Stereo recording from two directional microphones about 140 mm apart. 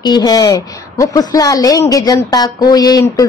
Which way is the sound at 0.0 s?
30° left (ahead or behind).